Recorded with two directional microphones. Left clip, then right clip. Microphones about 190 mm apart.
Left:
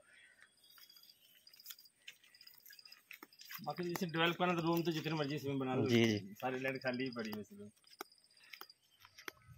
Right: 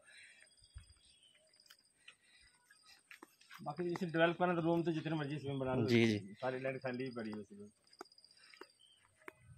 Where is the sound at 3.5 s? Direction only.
30° left (ahead or behind).